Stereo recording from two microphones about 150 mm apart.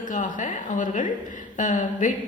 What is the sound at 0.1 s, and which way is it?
A woman's voice, 55° left (ahead or behind).